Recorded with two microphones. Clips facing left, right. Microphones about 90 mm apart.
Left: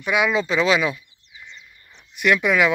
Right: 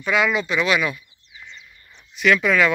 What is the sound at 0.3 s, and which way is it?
Speech, 30° left (ahead or behind).